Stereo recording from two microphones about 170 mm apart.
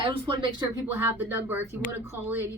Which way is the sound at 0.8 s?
10° right (ahead or behind).